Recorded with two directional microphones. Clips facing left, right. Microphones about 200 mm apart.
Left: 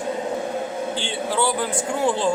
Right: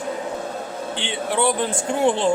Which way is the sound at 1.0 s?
20° right (ahead or behind).